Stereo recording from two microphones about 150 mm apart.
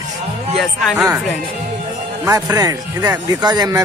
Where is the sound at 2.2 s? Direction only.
20° right (ahead or behind).